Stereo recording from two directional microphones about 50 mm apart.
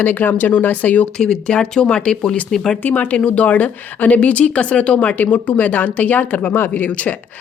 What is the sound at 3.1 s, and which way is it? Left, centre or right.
Speech, left.